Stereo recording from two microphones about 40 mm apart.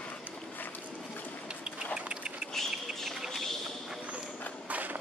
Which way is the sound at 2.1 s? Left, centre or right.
Right.